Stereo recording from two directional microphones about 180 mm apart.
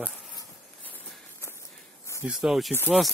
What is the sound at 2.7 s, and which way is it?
Speech, 10° left (ahead or behind).